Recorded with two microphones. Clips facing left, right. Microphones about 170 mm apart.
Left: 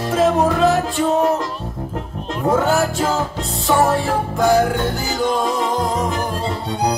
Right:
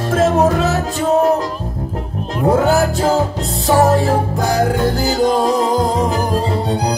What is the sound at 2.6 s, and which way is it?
Music, 35° right (ahead or behind).